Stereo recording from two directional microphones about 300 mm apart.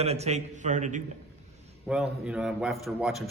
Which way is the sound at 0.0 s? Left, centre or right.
Right.